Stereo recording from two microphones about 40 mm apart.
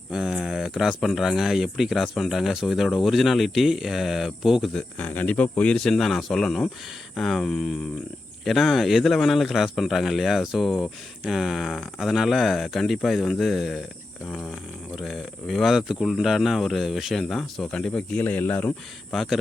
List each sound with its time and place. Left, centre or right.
0.1 s speech: centre
4.9 s speech: left
5.7 s speech: centre
14.9 s speech: centre
15.7 s speech: centre
17.2 s speech: centre
17.7 s speech: left
18.2 s speech: left